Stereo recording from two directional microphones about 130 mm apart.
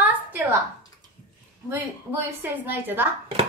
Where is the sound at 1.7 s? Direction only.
15° right (ahead or behind).